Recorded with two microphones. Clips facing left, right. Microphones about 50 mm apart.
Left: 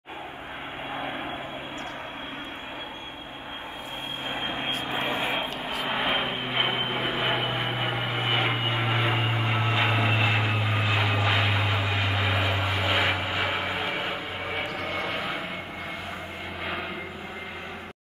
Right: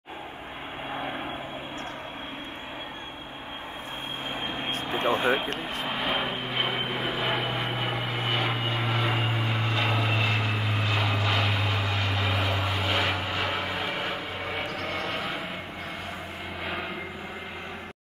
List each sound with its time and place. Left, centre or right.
0.9 s vehicle: centre
4.8 s vehicle: centre
14.9 s a sound: centre